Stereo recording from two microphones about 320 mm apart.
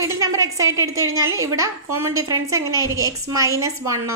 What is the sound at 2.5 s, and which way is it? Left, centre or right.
A woman's voice, centre.